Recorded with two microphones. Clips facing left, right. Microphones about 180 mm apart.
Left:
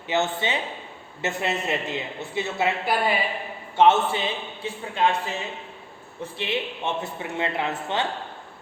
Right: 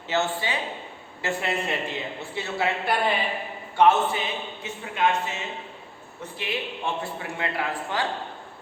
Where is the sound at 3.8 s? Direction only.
25° left (ahead or behind).